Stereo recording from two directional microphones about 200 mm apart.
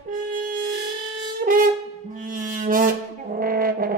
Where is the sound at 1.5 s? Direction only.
45° right (ahead or behind).